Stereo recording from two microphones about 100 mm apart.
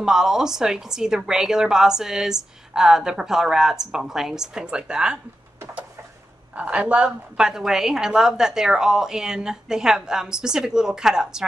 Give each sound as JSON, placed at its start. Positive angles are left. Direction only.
{"t": 0.0, "sound": "a woman's voice", "side_deg": -5}
{"t": 6.5, "sound": "a woman's voice", "side_deg": -15}